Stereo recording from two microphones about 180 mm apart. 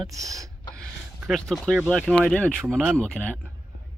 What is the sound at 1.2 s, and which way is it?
Speech, centre (ahead or behind).